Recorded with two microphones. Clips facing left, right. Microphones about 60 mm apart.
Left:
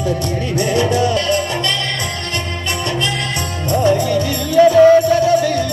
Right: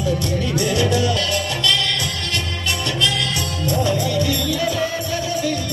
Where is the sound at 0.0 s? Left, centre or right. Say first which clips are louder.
Left 2 dB; left.